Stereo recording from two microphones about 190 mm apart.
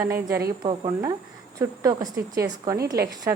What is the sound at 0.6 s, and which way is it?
A woman's voice, 25° right (ahead or behind).